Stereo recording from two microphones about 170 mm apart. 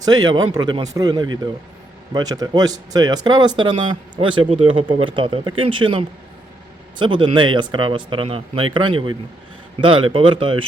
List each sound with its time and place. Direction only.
0.0 s speech: 25° right (ahead or behind)